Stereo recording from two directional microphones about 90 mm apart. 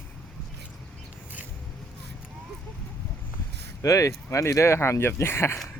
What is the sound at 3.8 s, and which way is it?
Speech, 35° left (ahead or behind).